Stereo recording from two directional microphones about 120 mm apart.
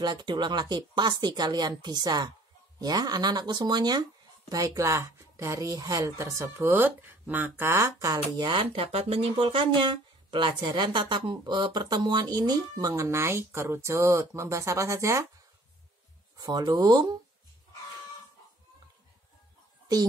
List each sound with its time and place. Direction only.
0.0 s speech: 40° right (ahead or behind)
8.4 s speech: 45° right (ahead or behind); by 15.2 s 25° right (ahead or behind)
16.3 s speech: 30° right (ahead or behind)